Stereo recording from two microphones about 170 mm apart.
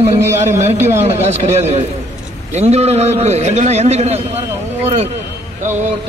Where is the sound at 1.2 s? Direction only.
40° right (ahead or behind).